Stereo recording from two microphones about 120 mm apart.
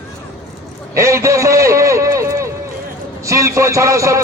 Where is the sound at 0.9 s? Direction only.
25° right (ahead or behind).